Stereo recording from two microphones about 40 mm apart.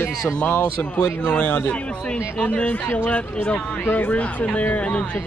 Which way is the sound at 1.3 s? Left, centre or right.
Left.